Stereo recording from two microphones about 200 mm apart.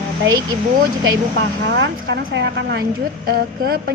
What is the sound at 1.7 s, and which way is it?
A woman's voice, 65° right (ahead or behind).